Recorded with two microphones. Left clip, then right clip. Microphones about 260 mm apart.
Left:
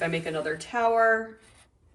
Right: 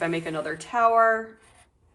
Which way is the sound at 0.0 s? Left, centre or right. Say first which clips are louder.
Right 1 dB; centre.